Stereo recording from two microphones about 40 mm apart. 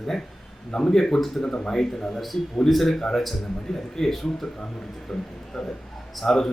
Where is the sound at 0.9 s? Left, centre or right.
Centre.